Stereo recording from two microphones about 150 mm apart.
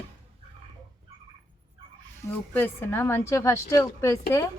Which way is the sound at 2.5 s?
15° left (ahead or behind).